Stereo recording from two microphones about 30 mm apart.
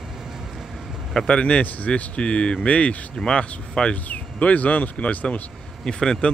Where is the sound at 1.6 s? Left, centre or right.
Left.